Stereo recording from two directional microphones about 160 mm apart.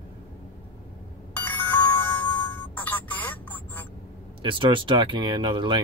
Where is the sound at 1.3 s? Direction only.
10° left (ahead or behind).